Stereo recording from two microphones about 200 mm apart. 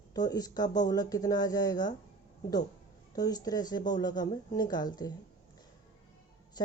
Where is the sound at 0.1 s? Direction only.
20° left (ahead or behind).